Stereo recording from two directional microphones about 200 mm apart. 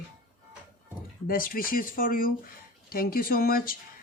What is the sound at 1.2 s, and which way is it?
Speech, 45° left (ahead or behind).